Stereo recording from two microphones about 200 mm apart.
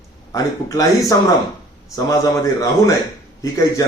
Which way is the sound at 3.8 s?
15° left (ahead or behind).